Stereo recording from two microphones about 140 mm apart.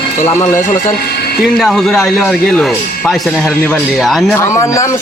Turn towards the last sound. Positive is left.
turn(degrees=20)  # may be behind; listen again after turning